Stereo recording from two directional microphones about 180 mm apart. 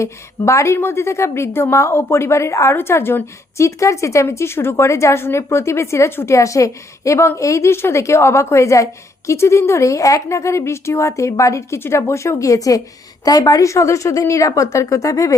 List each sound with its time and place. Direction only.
0.0 s a woman's voice: 15° left (ahead or behind)